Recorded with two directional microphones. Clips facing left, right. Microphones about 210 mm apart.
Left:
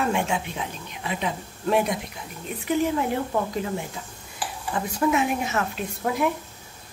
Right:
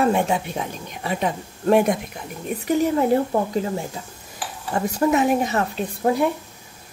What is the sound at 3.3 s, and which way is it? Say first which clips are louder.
Speech: right 4 dB; 35° right (ahead or behind).